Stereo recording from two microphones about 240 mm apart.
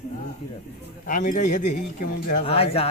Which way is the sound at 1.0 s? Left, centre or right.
Left.